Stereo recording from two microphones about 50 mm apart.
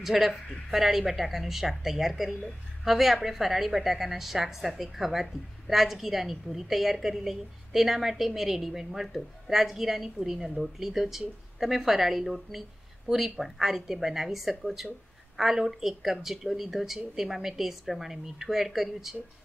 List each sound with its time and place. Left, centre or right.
0.0 s a woman's voice: centre